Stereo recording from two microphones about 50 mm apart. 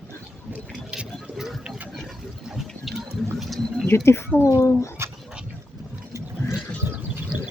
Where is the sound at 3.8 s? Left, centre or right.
Left.